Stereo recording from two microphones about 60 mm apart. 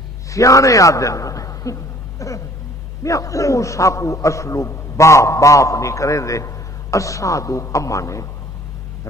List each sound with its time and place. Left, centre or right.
0.3 s a man's voice: left